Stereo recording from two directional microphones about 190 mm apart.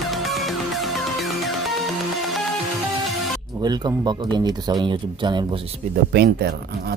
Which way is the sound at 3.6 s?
20° right (ahead or behind).